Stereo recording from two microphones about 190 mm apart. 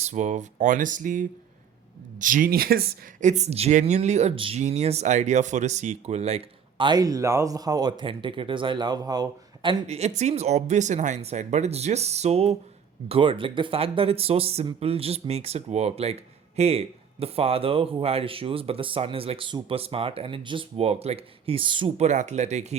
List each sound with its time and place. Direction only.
0.0 s speech: 40° right (ahead or behind); by 9.8 s 20° right (ahead or behind)
9.8 s speech: 35° right (ahead or behind)